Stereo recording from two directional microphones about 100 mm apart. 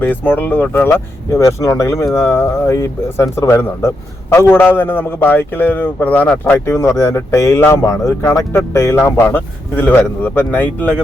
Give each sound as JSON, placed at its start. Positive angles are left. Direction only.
{"t": 0.0, "sound": "speech", "side_deg": 20}
{"t": 6.7, "sound": "speech", "side_deg": 30}